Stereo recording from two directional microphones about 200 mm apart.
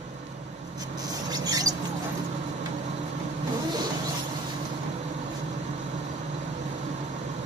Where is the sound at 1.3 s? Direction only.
20° right (ahead or behind).